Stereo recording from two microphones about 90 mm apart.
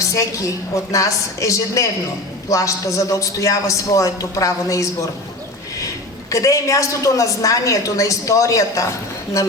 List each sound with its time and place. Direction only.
0.0 s a woman's voice: 35° left (ahead or behind)
6.3 s a woman's voice: 40° left (ahead or behind)